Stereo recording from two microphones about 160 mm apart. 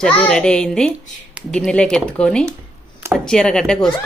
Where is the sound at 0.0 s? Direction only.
5° left (ahead or behind).